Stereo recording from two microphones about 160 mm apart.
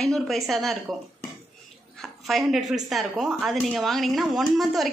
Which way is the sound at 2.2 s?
Centre (ahead or behind).